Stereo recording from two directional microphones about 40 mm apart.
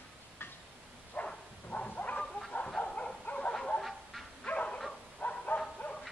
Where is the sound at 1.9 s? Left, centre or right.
Left.